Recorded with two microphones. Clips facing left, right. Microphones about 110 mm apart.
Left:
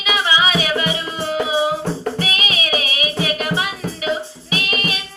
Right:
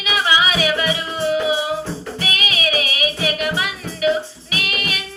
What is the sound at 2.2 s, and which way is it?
Music, 35° left (ahead or behind).